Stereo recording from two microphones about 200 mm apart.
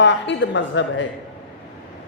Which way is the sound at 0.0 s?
65° left (ahead or behind).